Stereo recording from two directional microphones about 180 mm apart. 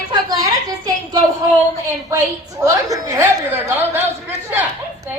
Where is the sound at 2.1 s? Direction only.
20° right (ahead or behind).